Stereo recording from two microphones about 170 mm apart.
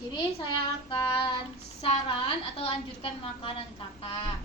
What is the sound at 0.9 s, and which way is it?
Child singing, 30° left (ahead or behind).